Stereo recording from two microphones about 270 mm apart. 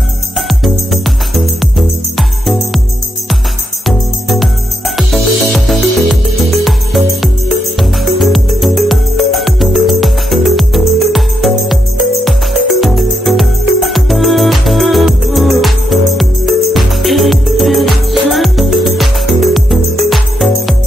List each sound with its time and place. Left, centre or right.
1.0 s music: centre
3.8 s music: centre
12.8 s music: centre